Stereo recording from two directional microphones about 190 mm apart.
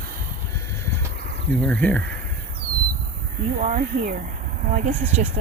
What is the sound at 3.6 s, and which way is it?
Speech, 45° right (ahead or behind).